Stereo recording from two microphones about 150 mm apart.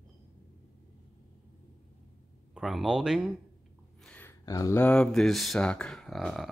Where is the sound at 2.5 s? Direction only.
Centre (ahead or behind).